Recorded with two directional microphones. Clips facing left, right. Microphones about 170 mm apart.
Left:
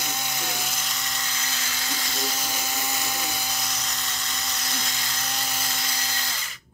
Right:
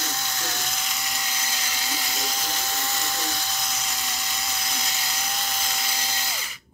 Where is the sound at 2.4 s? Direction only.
10° left (ahead or behind).